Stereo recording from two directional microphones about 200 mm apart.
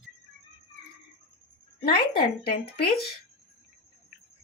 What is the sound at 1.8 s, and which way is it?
Speech, 50° left (ahead or behind).